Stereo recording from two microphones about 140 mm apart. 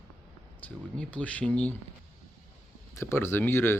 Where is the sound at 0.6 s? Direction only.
10° left (ahead or behind).